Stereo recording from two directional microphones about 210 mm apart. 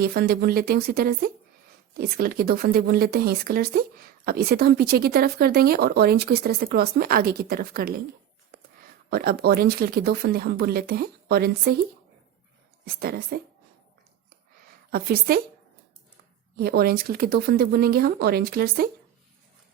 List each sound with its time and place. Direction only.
0.0 s speech: 45° right (ahead or behind)
9.0 s speech: 45° right (ahead or behind)
13.0 s speech: 45° right (ahead or behind)
14.8 s a woman's voice: 45° right (ahead or behind)
16.6 s speech: 45° right (ahead or behind)